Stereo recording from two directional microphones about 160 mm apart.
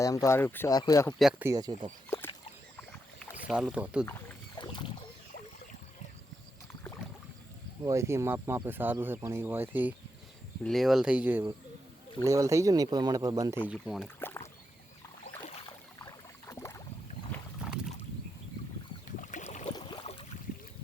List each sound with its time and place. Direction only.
0.0 s speech: 20° left (ahead or behind)
1.2 s speech: 5° right (ahead or behind)
1.5 s speech: 25° right (ahead or behind)
2.0 s a sound: 15° left (ahead or behind)
3.3 s speech: 5° right (ahead or behind)
4.5 s rowboat: 30° left (ahead or behind)
7.9 s speech: 15° right (ahead or behind)
10.6 s speech: centre (ahead or behind); by 13.6 s 25° right (ahead or behind)
13.8 s speech: 5° right (ahead or behind)
14.2 s rowboat: 15° left (ahead or behind)
16.0 s rowboat: 20° left (ahead or behind)
17.6 s rowboat: 5° right (ahead or behind)
19.2 s boat: 50° left (ahead or behind)
19.7 s boat: 30° left (ahead or behind)